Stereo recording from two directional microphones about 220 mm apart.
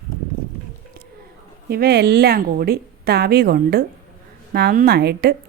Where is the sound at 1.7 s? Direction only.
45° right (ahead or behind).